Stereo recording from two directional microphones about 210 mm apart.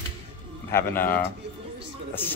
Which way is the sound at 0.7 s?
10° left (ahead or behind).